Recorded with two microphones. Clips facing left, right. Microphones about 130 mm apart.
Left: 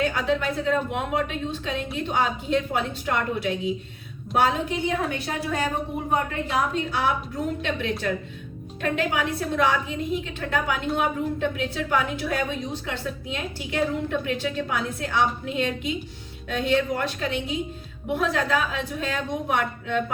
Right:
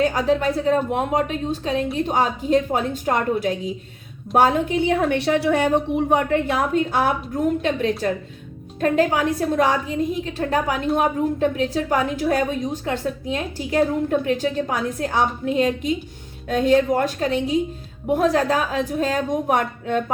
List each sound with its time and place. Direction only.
0.0 s a woman's voice: 35° right (ahead or behind)
4.4 s a woman's voice: 50° right (ahead or behind)